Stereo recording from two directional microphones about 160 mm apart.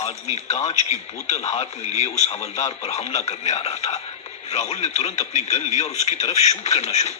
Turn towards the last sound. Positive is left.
turn(degrees=45)  # may be behind; listen again after turning